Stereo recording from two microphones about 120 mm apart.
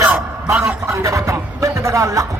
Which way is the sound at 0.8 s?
25° right (ahead or behind).